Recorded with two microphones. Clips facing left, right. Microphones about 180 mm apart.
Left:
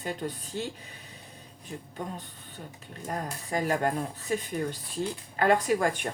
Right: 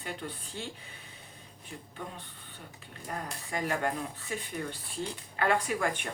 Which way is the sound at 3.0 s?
40° left (ahead or behind).